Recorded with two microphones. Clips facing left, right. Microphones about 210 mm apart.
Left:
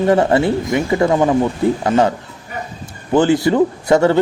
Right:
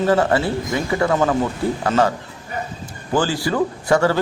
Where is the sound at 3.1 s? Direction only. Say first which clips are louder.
Left 7 dB; 20° left (ahead or behind).